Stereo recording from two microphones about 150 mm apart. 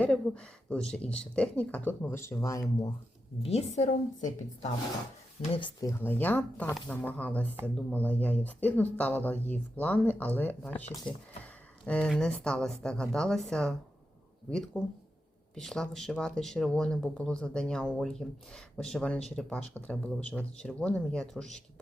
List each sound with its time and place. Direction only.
0.0 s speech: 5° left (ahead or behind); by 2.9 s 20° left (ahead or behind)
3.4 s a woman's voice: 45° left (ahead or behind)
3.8 s a woman's voice: 55° left (ahead or behind)
5.4 s speech: 35° left (ahead or behind)
5.8 s speech: 15° left (ahead or behind)